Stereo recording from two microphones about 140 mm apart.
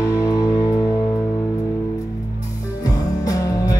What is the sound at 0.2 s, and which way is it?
Music, 25° left (ahead or behind).